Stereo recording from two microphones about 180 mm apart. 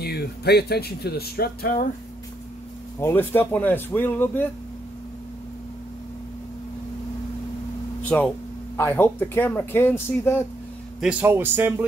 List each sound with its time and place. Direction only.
0.0 s speech: 65° left (ahead or behind)
3.0 s speech: 15° left (ahead or behind)
8.0 s a sound: 10° left (ahead or behind)
8.7 s speech: 10° left (ahead or behind)
11.0 s a man's voice: 5° right (ahead or behind)